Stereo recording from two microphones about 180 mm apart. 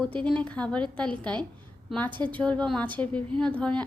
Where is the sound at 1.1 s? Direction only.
25° right (ahead or behind).